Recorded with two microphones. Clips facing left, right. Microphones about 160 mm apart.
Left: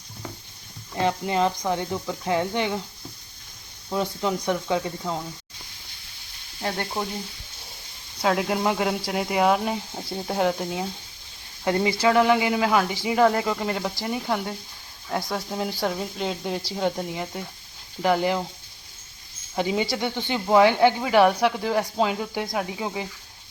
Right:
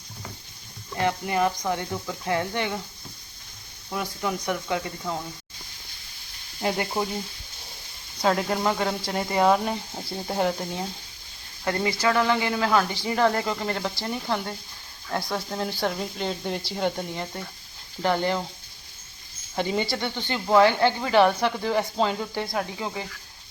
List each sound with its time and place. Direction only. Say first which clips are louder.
0.9 s speech: left 1 dB; 20° left (ahead or behind)
3.8 s speech: left 4 dB; 20° left (ahead or behind)
6.6 s frying: right 2 dB; 10° right (ahead or behind)
8.2 s speech: left 1 dB; 5° left (ahead or behind)
11.6 s speech: left 3 dB; 20° left (ahead or behind)
19.5 s speech: left 2 dB; 5° left (ahead or behind)